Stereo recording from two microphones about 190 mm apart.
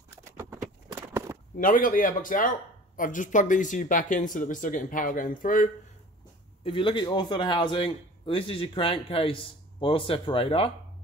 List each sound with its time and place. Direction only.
1.1 s a sound: 15° right (ahead or behind)
1.6 s speech: 45° left (ahead or behind)
6.6 s a man's voice: 25° left (ahead or behind)